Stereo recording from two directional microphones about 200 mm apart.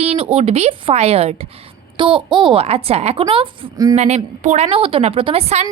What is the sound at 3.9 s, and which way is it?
Speech, 35° right (ahead or behind).